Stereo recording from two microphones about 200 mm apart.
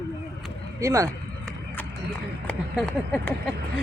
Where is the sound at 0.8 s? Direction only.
15° right (ahead or behind).